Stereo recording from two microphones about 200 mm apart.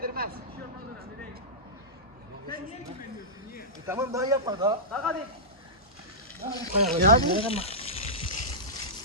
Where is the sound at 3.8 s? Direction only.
15° right (ahead or behind).